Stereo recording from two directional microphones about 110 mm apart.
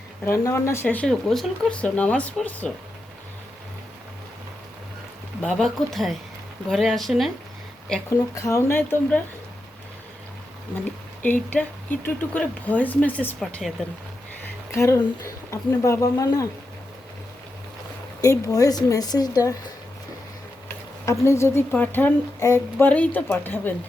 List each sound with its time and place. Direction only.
0.3 s a child's voice: 25° left (ahead or behind)
1.0 s speech: 5° left (ahead or behind)
5.4 s speech: 5° left (ahead or behind)
8.1 s a child's voice: 30° left (ahead or behind)
10.8 s speech: 15° left (ahead or behind)
13.4 s speech: centre (ahead or behind)
14.4 s speech: 25° left (ahead or behind)
18.2 s a woman's voice: 30° left (ahead or behind)
21.0 s a child's voice: 25° left (ahead or behind)
22.9 s speech: 15° left (ahead or behind)